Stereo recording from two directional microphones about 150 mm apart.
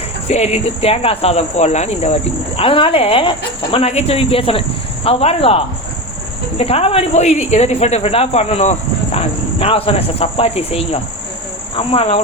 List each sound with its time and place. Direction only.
0.3 s speech: 45° left (ahead or behind)